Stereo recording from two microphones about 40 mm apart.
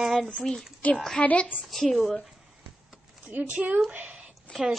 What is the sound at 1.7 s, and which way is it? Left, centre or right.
Speech, centre.